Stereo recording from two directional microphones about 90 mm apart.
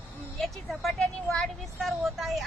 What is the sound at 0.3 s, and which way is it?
Speech, centre (ahead or behind).